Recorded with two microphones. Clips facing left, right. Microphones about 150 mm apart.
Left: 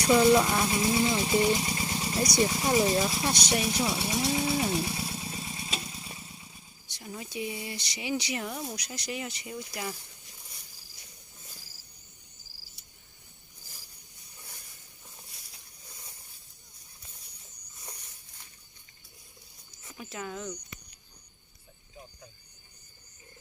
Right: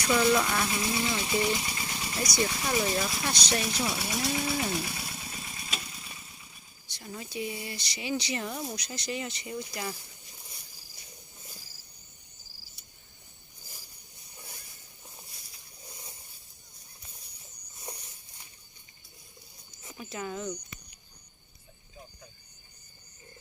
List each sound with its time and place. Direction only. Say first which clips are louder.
0.0 s speech: left 4 dB; 25° left (ahead or behind)
3.5 s speech: left 1 dB; 10° left (ahead or behind)
3.8 s speech: left 2 dB; 25° left (ahead or behind)
4.7 s motorcycle: left 3 dB; 25° left (ahead or behind)
7.0 s speech: even; 10° left (ahead or behind)
8.4 s speech: right 1 dB; centre (ahead or behind)
20.0 s speech: right 2 dB; centre (ahead or behind)